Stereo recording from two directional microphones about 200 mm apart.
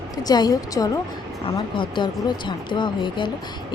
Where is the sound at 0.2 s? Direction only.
20° left (ahead or behind).